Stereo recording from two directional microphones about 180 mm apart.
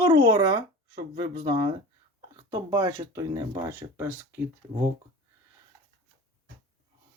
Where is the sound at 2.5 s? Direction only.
15° right (ahead or behind).